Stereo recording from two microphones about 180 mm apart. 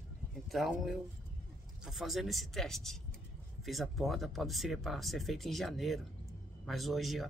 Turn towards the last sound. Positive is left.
turn(degrees=0)  # may be behind; listen again after turning